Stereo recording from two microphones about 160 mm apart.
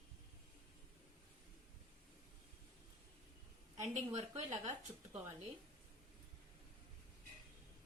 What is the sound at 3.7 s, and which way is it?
A woman's voice, 50° right (ahead or behind).